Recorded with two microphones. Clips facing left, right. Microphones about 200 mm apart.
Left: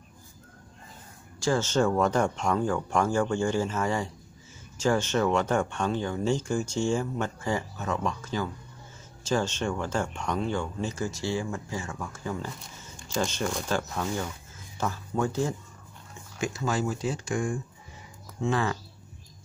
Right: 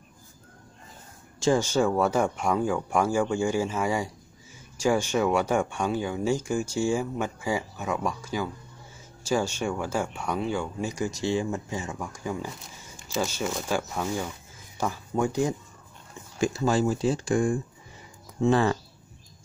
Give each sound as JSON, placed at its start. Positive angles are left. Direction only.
{"t": 1.4, "sound": "speech", "side_deg": -15}
{"t": 16.3, "sound": "speech", "side_deg": -30}